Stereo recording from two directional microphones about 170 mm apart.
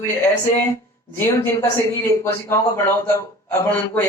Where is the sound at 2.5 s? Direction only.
15° left (ahead or behind).